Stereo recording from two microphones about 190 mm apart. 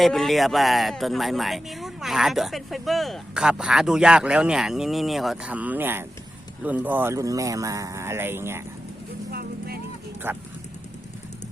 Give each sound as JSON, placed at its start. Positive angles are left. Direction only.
{"t": 0.0, "sound": "speech", "side_deg": 0}
{"t": 9.3, "sound": "vehicle", "side_deg": -55}
{"t": 10.3, "sound": "speech", "side_deg": -10}